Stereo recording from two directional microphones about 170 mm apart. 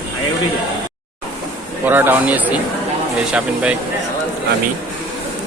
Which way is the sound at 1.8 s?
10° right (ahead or behind).